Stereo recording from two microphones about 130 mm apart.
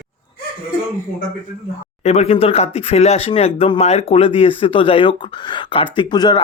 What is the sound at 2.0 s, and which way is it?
Speech, 60° left (ahead or behind).